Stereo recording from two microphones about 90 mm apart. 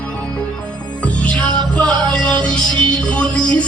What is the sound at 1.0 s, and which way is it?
Music, 15° left (ahead or behind).